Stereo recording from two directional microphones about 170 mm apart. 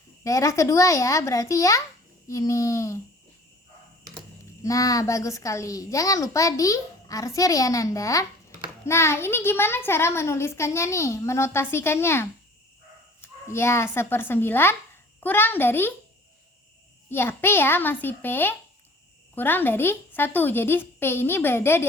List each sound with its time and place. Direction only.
0.3 s a child's voice: 20° left (ahead or behind)
4.6 s a child's voice: 20° left (ahead or behind)
17.1 s a child's voice: 15° left (ahead or behind)